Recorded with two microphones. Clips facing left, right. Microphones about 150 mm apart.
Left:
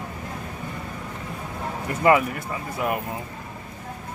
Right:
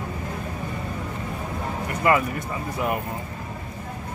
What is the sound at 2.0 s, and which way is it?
Speech, 20° left (ahead or behind).